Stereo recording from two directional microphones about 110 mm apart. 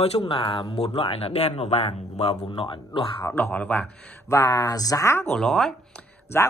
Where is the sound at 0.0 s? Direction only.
65° left (ahead or behind); by 3.3 s 50° left (ahead or behind).